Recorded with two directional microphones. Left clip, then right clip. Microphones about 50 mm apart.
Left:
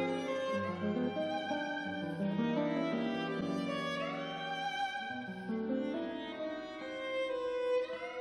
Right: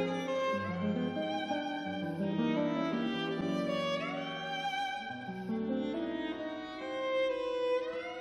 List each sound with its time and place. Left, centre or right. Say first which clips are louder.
0.0 s music: right 2 dB; right
7.1 s music: right 3 dB; right